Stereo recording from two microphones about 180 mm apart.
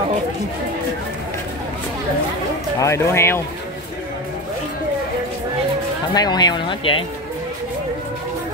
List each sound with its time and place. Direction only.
2.8 s speech: 15° left (ahead or behind)
6.1 s speech: 20° left (ahead or behind)